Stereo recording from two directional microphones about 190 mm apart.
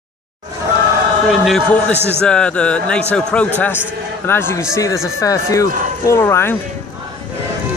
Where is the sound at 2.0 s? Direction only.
10° right (ahead or behind).